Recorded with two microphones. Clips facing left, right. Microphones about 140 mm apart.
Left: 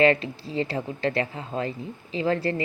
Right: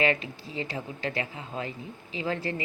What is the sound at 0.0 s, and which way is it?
Speech, 35° left (ahead or behind).